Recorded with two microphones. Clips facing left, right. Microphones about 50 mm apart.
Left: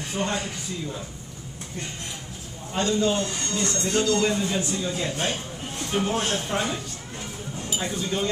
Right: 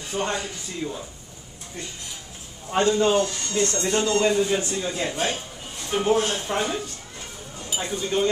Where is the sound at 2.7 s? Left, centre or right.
Right.